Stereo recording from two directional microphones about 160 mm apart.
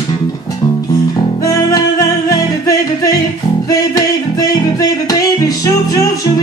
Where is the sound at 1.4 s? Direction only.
20° left (ahead or behind).